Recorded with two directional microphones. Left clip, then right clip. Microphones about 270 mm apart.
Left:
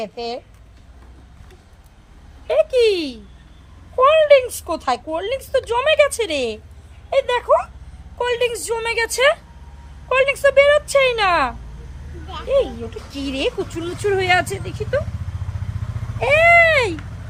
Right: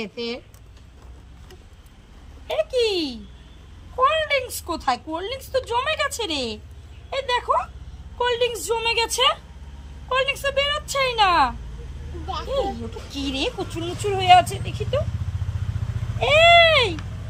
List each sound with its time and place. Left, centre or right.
0.0 s speech: centre
2.5 s a woman's voice: centre
13.1 s speech: centre
16.1 s a sound: centre